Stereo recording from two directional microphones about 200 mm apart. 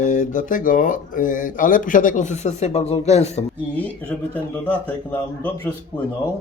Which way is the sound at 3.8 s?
5° left (ahead or behind).